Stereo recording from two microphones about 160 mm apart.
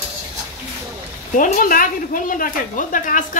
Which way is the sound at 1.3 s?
55° left (ahead or behind).